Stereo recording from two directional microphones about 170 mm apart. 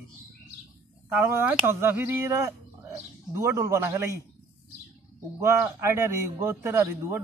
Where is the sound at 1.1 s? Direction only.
10° right (ahead or behind).